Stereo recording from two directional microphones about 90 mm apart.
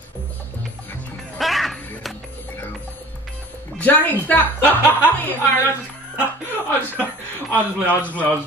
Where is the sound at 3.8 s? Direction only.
20° left (ahead or behind).